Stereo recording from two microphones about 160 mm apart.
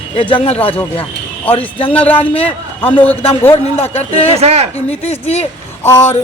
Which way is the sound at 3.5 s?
40° left (ahead or behind).